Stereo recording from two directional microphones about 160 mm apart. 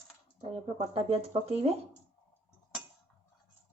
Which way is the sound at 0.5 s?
35° right (ahead or behind).